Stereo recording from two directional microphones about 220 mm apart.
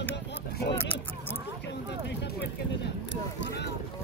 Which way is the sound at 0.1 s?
50° left (ahead or behind).